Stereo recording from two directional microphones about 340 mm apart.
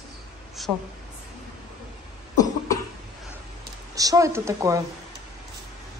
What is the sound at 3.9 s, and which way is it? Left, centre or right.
Speech, centre.